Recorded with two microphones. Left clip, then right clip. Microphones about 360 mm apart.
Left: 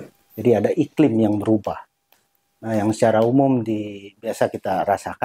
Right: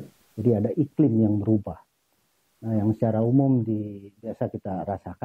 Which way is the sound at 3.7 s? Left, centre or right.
Left.